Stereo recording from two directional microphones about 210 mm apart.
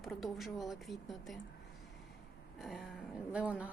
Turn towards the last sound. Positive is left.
turn(degrees=-5)  # may be behind; listen again after turning